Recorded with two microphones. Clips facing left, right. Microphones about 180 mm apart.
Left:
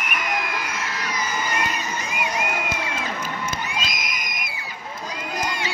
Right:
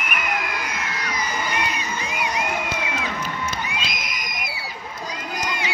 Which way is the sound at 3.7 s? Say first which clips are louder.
Left 1 dB; 40° left (ahead or behind).